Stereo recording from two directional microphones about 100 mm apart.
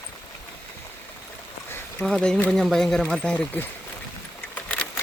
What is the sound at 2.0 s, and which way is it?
Speech, 5° left (ahead or behind).